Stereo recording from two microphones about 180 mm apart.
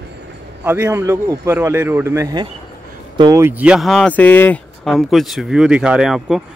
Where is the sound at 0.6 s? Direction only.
10° right (ahead or behind).